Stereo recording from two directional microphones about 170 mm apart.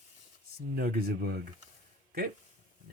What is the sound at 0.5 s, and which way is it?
Speech, 60° right (ahead or behind).